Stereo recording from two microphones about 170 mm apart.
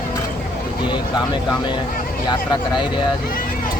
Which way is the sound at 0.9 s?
25° left (ahead or behind).